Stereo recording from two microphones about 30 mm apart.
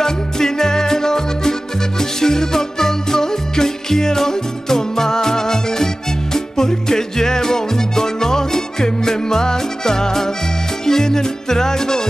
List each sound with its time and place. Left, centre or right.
0.0 s music: centre